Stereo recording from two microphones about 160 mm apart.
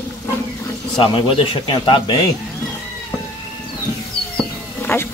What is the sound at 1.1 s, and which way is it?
Speech, 35° left (ahead or behind).